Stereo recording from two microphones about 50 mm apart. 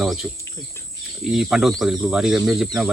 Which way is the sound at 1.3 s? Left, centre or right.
Centre.